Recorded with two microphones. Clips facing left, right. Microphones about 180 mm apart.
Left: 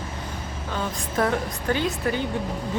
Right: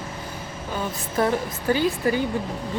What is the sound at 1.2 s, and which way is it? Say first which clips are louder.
Speech: right 1 dB; 5° right (ahead or behind).